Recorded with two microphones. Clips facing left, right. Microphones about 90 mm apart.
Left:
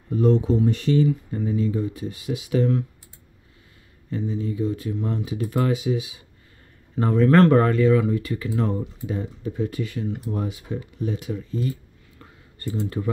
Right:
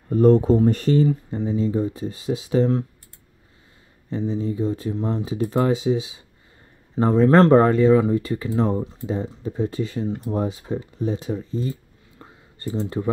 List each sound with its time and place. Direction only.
0.1 s speech: 45° right (ahead or behind)
1.3 s speech: 25° right (ahead or behind)
4.1 s speech: 30° right (ahead or behind)